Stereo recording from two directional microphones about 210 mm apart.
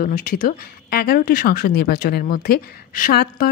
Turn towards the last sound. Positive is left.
turn(degrees=45)  # may be behind; listen again after turning